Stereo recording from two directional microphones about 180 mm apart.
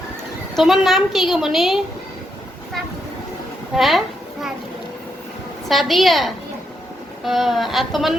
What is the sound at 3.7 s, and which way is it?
Speech, centre (ahead or behind).